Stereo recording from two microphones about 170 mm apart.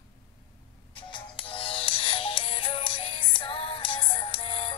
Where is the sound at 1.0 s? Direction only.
30° left (ahead or behind).